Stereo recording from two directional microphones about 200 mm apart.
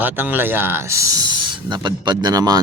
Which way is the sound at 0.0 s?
10° right (ahead or behind).